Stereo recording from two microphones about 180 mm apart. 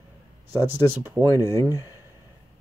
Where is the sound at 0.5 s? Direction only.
10° right (ahead or behind).